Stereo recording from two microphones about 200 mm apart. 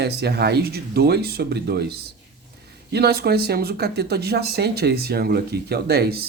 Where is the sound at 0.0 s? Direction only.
55° right (ahead or behind).